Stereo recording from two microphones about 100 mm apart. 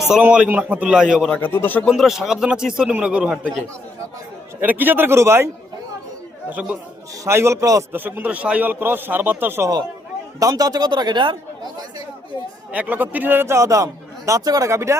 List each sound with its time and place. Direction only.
0.0 s a man's voice: 10° right (ahead or behind)
1.4 s speech: 20° left (ahead or behind)
1.9 s a man's voice: 5° right (ahead or behind)
4.6 s a man's voice: 20° right (ahead or behind)
6.5 s a man's voice: 15° right (ahead or behind)
7.3 s a man's voice: 25° right (ahead or behind)
7.9 s a man's voice: 20° right (ahead or behind)
10.5 s speech: 40° right (ahead or behind)
12.7 s a man's voice: 15° right (ahead or behind)